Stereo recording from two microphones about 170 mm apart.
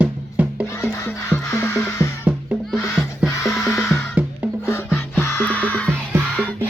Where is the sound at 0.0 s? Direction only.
10° right (ahead or behind).